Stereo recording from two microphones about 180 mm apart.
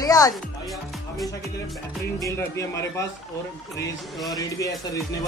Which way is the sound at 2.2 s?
15° left (ahead or behind).